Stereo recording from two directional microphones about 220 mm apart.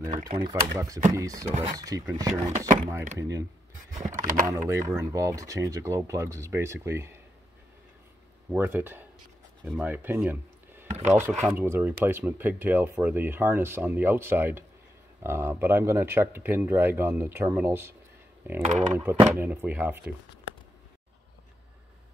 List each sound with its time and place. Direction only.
0.1 s speech: 25° right (ahead or behind)
4.2 s speech: 35° right (ahead or behind)
4.5 s speech: 15° right (ahead or behind)
8.5 s speech: 10° right (ahead or behind)
18.7 s speech: 35° right (ahead or behind)
18.9 s speech: 10° right (ahead or behind)